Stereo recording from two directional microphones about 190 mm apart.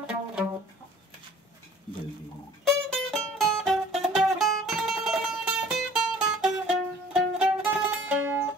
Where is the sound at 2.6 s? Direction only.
Centre (ahead or behind).